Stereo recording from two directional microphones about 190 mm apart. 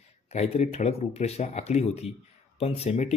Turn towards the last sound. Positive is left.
turn(degrees=35)  # may be behind; listen again after turning